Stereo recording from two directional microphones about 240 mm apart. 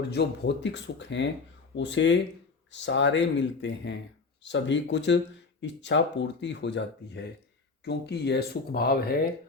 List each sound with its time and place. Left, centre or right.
0.1 s speech: left